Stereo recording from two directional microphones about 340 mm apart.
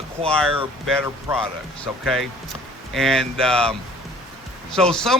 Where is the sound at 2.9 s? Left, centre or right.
Centre.